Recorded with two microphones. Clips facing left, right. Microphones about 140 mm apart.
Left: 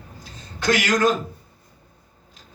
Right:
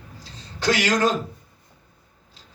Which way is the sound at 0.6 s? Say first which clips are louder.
Left 1 dB; 35° right (ahead or behind).